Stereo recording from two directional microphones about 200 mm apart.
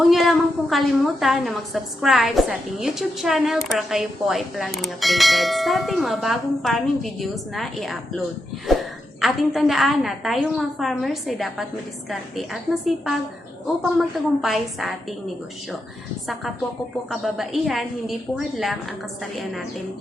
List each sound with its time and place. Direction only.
0.0 s a woman's voice: centre (ahead or behind)
9.2 s a woman's voice: centre (ahead or behind)
14.4 s a woman's voice: centre (ahead or behind)
17.1 s a woman's voice: centre (ahead or behind)